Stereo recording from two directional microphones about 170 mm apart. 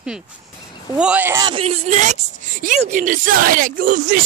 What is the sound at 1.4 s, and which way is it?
Speech, 35° right (ahead or behind).